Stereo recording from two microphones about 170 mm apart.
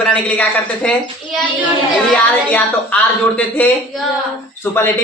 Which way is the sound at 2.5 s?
10° left (ahead or behind).